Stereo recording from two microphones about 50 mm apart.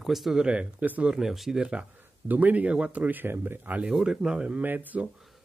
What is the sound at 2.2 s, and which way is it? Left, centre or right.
A man's voice, right.